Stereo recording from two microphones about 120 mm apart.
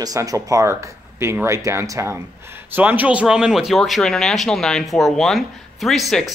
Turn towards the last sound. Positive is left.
turn(degrees=0)  # may be behind; listen again after turning